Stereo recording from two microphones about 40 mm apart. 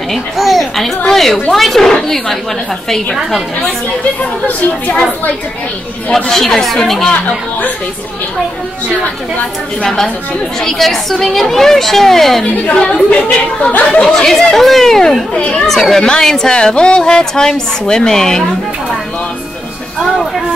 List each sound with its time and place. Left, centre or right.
0.1 s a woman's voice: centre
4.2 s speech: left
6.1 s a woman's voice: centre
7.1 s speech: left
10.6 s a woman's voice: centre
12.5 s a woman's voice: left
14.0 s a woman's voice: centre
15.3 s a woman's voice: left
15.6 s a woman's voice: centre
16.5 s a woman's voice: left
20.0 s a woman's voice: centre